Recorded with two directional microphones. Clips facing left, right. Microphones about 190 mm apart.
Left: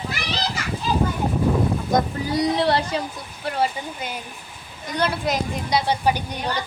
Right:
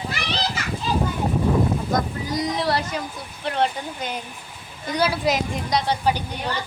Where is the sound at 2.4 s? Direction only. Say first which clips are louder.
Left 4 dB; 30° left (ahead or behind).